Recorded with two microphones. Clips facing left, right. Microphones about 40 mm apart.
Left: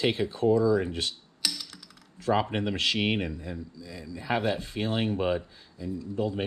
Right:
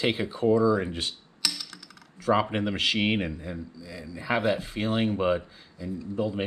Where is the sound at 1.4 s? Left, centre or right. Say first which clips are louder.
Right 1 dB; centre.